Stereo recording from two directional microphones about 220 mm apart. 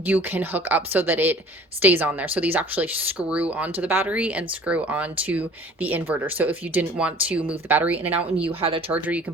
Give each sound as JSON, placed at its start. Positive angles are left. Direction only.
{"t": 0.0, "sound": "speech", "side_deg": -10}
{"t": 8.4, "sound": "speech", "side_deg": -25}
{"t": 8.9, "sound": "speech", "side_deg": -5}